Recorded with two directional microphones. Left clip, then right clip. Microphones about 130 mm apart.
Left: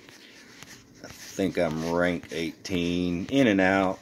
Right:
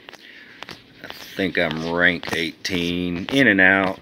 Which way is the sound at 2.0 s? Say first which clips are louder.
Right 10 dB; 5° right (ahead or behind).